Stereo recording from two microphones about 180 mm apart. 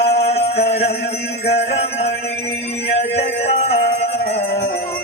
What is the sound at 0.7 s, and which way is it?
Music, 35° left (ahead or behind).